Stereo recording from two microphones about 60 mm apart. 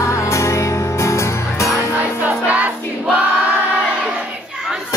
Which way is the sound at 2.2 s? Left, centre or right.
Right.